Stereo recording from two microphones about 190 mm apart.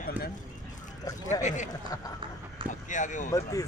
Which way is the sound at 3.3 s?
20° left (ahead or behind).